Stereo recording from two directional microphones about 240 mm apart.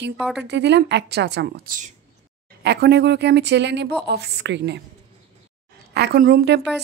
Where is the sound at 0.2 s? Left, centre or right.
Centre.